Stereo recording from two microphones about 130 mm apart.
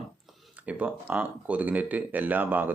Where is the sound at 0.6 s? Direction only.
10° right (ahead or behind).